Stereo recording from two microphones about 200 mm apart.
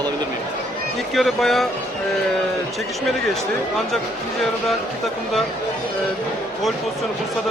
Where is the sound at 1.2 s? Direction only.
Centre (ahead or behind).